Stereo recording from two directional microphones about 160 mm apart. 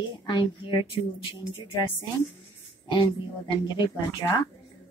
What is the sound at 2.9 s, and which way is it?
A woman's voice, 30° left (ahead or behind).